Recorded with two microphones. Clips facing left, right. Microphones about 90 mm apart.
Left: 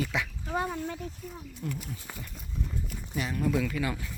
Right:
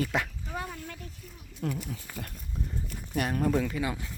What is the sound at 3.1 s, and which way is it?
Speech, 55° right (ahead or behind).